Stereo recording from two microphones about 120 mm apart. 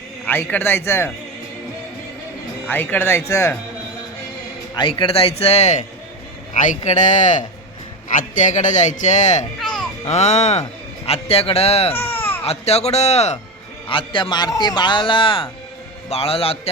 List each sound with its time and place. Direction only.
0.3 s speech: 15° left (ahead or behind)
2.6 s speech: 15° left (ahead or behind)
4.7 s a man's voice: 40° left (ahead or behind); by 5.8 s 70° left (ahead or behind)
6.5 s a man's voice: 85° left
9.6 s music: centre (ahead or behind)
10.0 s a man's voice: 65° left (ahead or behind)
11.9 s baby cry: 20° left (ahead or behind)
12.5 s a man's voice: 60° left (ahead or behind)
13.8 s a man's voice: 45° left (ahead or behind)